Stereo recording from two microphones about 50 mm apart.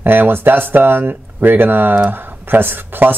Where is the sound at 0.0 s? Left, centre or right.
Right.